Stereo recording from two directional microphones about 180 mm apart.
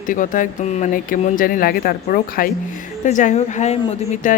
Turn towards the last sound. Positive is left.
turn(degrees=45)  # may be behind; listen again after turning